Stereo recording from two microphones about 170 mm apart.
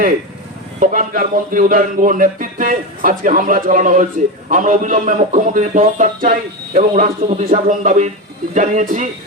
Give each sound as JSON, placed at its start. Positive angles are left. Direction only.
{"t": 0.8, "sound": "speech", "side_deg": -55}